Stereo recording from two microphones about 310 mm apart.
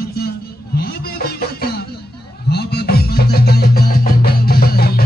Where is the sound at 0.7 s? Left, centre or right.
Left.